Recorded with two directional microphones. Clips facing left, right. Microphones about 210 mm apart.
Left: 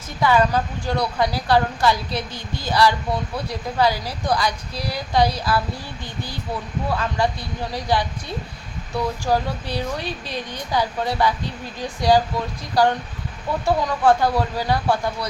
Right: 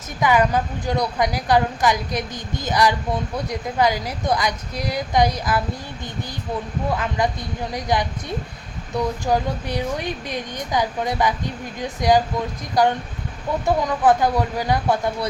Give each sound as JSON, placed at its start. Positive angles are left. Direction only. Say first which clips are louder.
{"t": 0.2, "sound": "a woman's voice", "louder": "even", "side_deg": -15}
{"t": 6.9, "sound": "a woman's voice", "louder": "left 1 dB", "side_deg": -20}
{"t": 9.2, "sound": "speech", "louder": "right 1 dB", "side_deg": -20}